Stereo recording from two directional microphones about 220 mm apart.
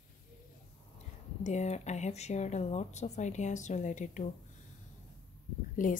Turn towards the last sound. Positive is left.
turn(degrees=35)  # may be behind; listen again after turning